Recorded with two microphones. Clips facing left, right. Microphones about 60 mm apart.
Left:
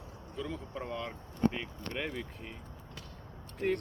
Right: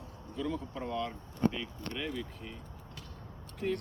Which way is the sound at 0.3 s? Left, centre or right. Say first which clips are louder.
Right 3 dB; centre.